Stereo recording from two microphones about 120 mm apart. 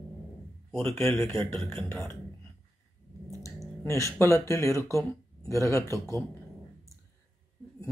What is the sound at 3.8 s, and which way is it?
Speech, 25° left (ahead or behind).